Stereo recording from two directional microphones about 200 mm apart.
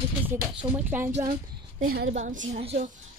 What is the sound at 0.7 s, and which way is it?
Speech, 10° right (ahead or behind).